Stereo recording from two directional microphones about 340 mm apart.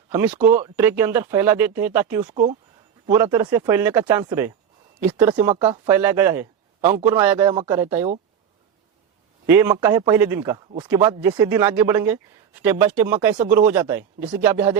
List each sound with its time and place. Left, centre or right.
0.1 s speech: centre
9.5 s speech: centre